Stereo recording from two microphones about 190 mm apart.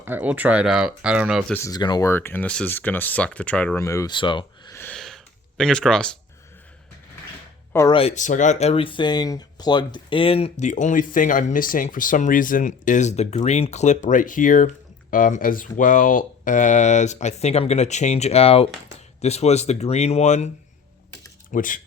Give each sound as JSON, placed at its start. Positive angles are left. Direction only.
{"t": 0.0, "sound": "speech", "side_deg": -10}
{"t": 1.5, "sound": "speech", "side_deg": 20}
{"t": 4.7, "sound": "a sound", "side_deg": 10}
{"t": 7.7, "sound": "speech", "side_deg": 15}
{"t": 7.9, "sound": "speech", "side_deg": 35}
{"t": 21.5, "sound": "speech", "side_deg": 45}